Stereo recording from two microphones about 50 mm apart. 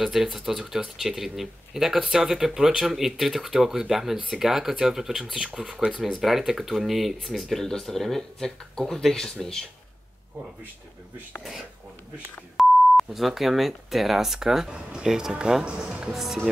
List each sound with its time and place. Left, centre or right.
0.0 s speech: centre
12.5 s speech: centre
14.7 s speech: centre